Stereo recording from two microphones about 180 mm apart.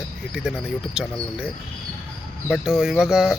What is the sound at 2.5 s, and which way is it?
Speech, 5° right (ahead or behind).